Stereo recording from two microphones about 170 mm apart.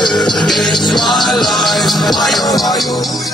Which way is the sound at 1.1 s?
Centre (ahead or behind).